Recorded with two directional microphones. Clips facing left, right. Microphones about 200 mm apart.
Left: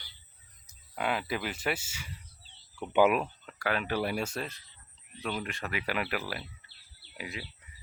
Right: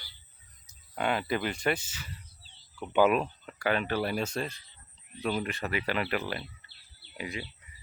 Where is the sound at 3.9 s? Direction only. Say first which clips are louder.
Right 1 dB; 15° left (ahead or behind).